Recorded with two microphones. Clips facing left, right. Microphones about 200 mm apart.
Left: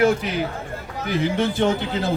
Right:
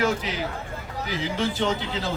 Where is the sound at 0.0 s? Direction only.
60° left (ahead or behind).